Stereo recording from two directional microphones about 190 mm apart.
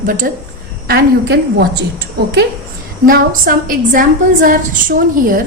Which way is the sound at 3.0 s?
50° right (ahead or behind).